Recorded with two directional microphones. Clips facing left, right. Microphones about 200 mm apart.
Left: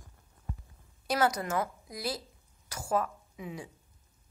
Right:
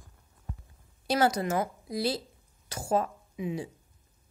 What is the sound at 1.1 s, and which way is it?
A woman's voice, 30° right (ahead or behind).